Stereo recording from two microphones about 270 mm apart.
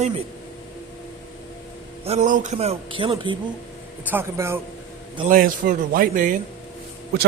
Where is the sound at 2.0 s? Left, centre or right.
Right; by 4.6 s centre.